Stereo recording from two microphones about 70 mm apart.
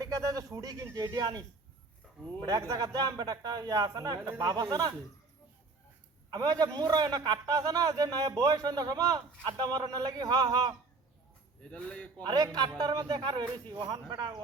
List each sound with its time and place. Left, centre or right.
0.0 s speech: right
0.9 s speech: right
2.4 s a man's voice: right
6.3 s a man's voice: right
11.6 s speech: centre
12.2 s speech: right